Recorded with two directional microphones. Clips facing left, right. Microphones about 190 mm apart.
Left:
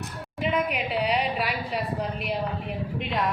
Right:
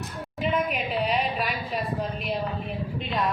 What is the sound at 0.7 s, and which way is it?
A woman's voice, 75° left (ahead or behind).